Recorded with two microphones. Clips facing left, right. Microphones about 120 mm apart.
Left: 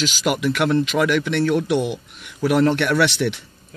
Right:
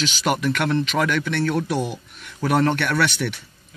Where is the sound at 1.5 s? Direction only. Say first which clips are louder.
Left 4 dB; 30° right (ahead or behind).